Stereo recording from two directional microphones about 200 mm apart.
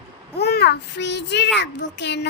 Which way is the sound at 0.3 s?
55° left (ahead or behind).